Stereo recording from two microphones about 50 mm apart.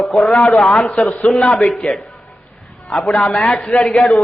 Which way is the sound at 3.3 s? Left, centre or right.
Left.